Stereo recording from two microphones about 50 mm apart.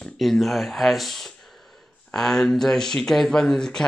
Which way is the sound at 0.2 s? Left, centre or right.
Centre.